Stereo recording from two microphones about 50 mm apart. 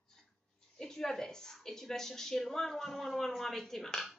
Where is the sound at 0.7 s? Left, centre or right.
Centre.